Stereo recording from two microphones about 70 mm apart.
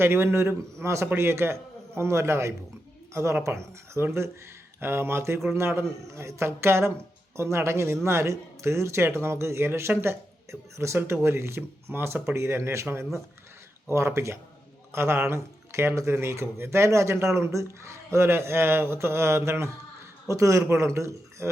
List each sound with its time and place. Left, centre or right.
0.0 s a man's voice: right